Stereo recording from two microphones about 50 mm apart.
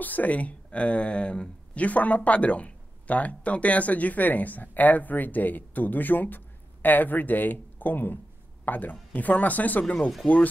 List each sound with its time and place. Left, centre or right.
0.0 s speech: left